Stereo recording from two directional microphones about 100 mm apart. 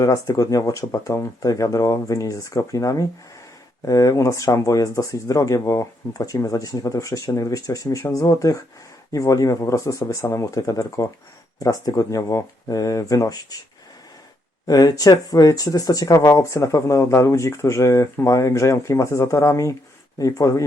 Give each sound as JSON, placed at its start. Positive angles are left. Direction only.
{"t": 0.0, "sound": "speech", "side_deg": 35}
{"t": 14.7, "sound": "speech", "side_deg": 40}